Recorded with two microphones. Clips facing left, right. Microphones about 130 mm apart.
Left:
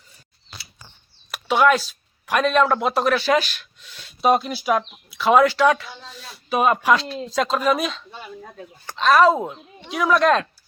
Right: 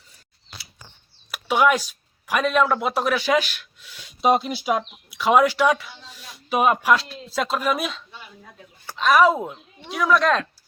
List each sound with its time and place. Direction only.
1.3 s speech: 10° right (ahead or behind)
8.1 s a sound: 45° left (ahead or behind)
8.9 s speech: 10° right (ahead or behind)
9.8 s speech: centre (ahead or behind)